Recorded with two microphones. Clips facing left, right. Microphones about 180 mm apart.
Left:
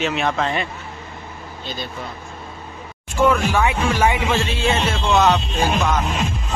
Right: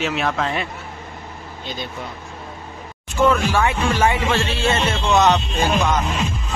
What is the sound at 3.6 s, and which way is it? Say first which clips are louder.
Speech: even; 10° left (ahead or behind).